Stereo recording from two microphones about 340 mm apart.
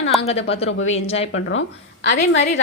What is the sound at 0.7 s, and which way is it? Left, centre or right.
Speech, left.